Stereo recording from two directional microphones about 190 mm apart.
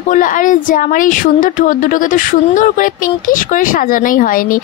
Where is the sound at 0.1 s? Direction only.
45° left (ahead or behind).